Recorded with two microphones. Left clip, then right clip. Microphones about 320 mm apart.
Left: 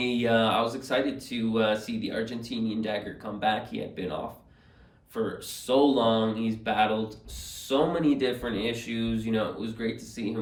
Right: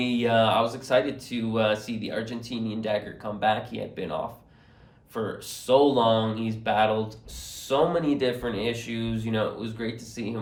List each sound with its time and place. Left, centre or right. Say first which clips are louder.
0.0 s speech: right 2 dB; centre
0.6 s speech: right 2 dB; centre
0.9 s speech: right 4 dB; centre
5.1 s speech: even; centre